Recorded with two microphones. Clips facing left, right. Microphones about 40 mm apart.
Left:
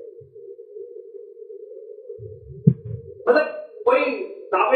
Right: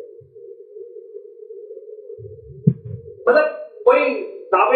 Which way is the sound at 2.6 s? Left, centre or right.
Centre.